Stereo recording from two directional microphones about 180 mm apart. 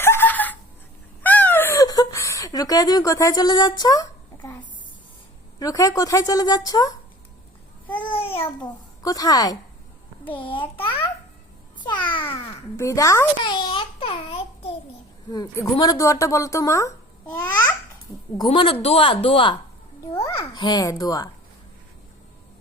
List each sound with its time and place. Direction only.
0.0 s a sound: 10° left (ahead or behind)
5.5 s a woman's voice: 20° left (ahead or behind)
7.9 s a child's voice: 30° left (ahead or behind)
12.7 s babbling: 15° left (ahead or behind)
15.3 s a woman's voice: 20° left (ahead or behind)
18.3 s a woman's voice: 30° left (ahead or behind)